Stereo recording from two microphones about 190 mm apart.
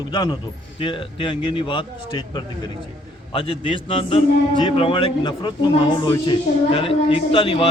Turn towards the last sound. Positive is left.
turn(degrees=25)  # may be behind; listen again after turning